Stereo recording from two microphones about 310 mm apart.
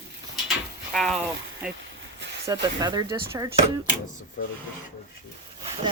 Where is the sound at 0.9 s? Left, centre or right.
Centre.